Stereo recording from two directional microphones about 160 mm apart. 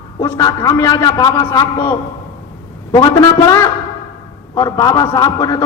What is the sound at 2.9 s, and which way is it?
A man's voice, 20° left (ahead or behind).